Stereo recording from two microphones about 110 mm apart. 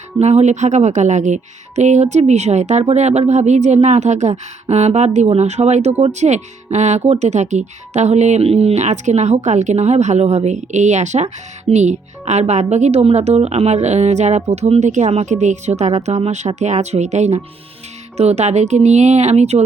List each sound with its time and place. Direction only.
0.2 s speech: 85° right
16.6 s speech: 90° right